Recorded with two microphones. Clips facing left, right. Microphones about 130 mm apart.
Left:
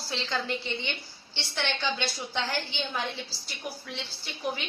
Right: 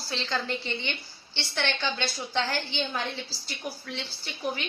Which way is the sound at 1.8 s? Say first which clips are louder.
Even; 5° left (ahead or behind).